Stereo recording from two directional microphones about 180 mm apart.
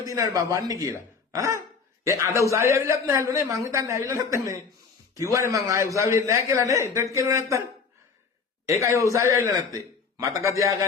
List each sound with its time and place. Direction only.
0.0 s a man's voice: 20° right (ahead or behind)
1.3 s dog: 15° right (ahead or behind)
2.0 s a man's voice: 15° right (ahead or behind)
8.6 s a man's voice: 15° right (ahead or behind)